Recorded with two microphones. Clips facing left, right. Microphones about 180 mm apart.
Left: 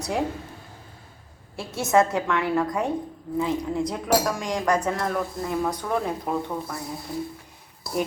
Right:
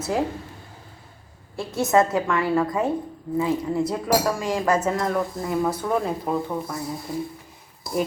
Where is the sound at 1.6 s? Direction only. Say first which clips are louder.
Right 1 dB; centre (ahead or behind).